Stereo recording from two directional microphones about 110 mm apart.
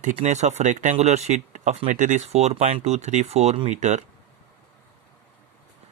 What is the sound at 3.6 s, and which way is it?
Speech, 90° right.